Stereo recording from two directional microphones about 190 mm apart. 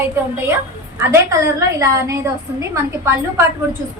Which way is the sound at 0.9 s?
15° right (ahead or behind).